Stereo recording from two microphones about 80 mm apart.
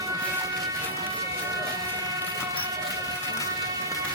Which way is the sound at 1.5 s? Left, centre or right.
Right.